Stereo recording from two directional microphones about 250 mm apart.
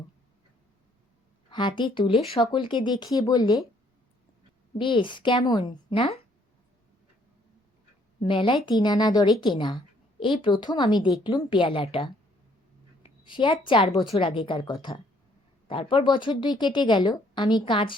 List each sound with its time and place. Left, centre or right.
1.5 s speech: centre
4.8 s speech: centre
8.2 s speech: left
13.2 s speech: centre